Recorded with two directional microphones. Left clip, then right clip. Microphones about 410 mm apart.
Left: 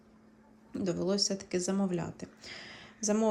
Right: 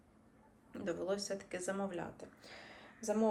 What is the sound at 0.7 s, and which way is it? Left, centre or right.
Speech, centre.